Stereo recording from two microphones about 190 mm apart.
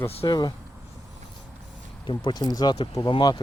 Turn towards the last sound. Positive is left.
turn(degrees=25)  # may be behind; listen again after turning